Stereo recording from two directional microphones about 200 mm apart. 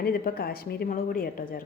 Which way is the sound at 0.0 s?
50° left (ahead or behind).